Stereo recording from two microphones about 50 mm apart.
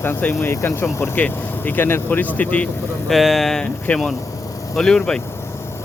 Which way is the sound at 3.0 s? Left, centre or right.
Centre.